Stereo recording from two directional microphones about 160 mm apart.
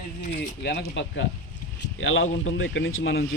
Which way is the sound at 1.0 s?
90° left.